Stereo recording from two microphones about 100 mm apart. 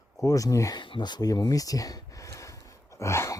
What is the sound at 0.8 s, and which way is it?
Speech, 50° left (ahead or behind).